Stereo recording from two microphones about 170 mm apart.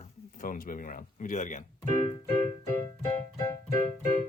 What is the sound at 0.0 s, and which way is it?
Speech, 50° left (ahead or behind).